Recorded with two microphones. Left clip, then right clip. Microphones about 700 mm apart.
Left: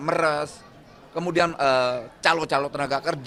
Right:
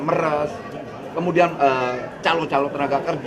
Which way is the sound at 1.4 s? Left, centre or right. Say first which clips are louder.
Right 2 dB; left.